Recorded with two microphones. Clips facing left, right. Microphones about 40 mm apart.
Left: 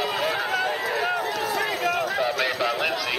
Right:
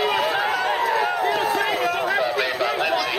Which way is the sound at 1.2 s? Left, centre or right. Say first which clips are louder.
Right 5 dB; right.